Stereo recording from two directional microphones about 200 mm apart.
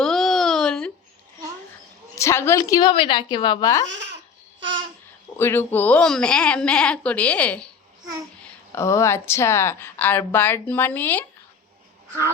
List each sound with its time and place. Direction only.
0.0 s a sound: centre (ahead or behind)
2.1 s a woman's voice: 15° left (ahead or behind)
3.9 s babbling: 60° right (ahead or behind)
5.4 s speech: 10° left (ahead or behind)